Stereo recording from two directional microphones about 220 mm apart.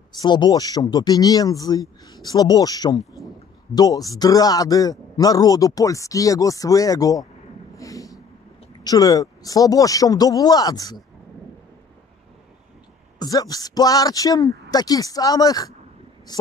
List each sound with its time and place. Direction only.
0.1 s speech: 20° left (ahead or behind)
7.7 s a sound: 15° left (ahead or behind)
8.8 s speech: 15° left (ahead or behind)
13.2 s a woman's voice: 15° left (ahead or behind)